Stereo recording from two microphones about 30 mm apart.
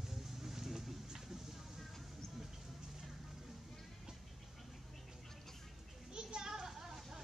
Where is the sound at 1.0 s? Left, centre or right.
Centre.